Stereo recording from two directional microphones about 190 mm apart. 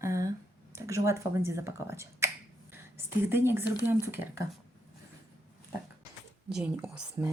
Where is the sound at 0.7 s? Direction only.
15° right (ahead or behind).